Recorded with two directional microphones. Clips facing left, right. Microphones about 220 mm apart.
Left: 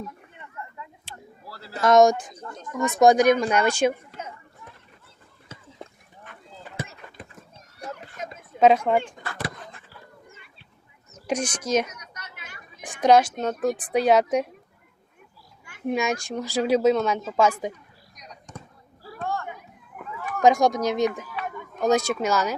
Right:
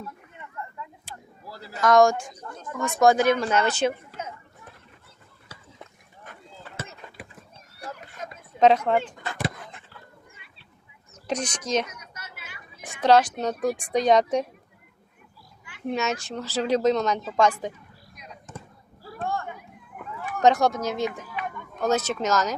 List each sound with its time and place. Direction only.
1.5 s a man's voice: 15° right (ahead or behind)
1.8 s speech: 20° left (ahead or behind)
5.5 s a sound: 25° left (ahead or behind)
7.8 s a sound: 20° left (ahead or behind)
8.5 s speech: 10° left (ahead or behind)
9.2 s dog: 20° right (ahead or behind)
11.3 s speech: 10° left (ahead or behind)
11.9 s a sound: 5° right (ahead or behind)
12.8 s speech: 15° left (ahead or behind)
15.9 s speech: 10° left (ahead or behind)
18.2 s basketball bounce: 5° right (ahead or behind)
20.4 s speech: 10° left (ahead or behind)